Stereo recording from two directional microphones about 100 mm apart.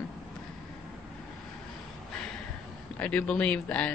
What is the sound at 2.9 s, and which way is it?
Speech, 15° left (ahead or behind).